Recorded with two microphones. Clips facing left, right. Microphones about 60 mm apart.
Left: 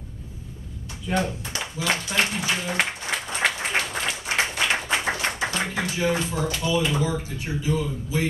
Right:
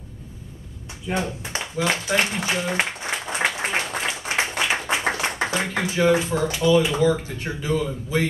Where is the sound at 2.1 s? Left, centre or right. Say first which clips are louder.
Right 2 dB; right.